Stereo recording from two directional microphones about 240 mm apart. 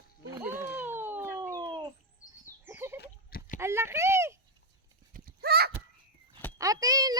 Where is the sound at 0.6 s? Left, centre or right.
Centre.